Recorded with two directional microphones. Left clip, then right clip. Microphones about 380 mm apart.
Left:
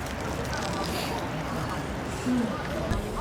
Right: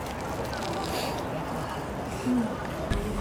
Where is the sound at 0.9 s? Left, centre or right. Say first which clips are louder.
Even; right.